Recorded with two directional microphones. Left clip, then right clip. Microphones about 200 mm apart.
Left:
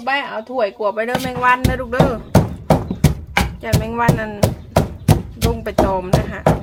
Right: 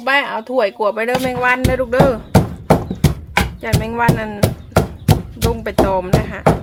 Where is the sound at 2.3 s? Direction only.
Centre (ahead or behind).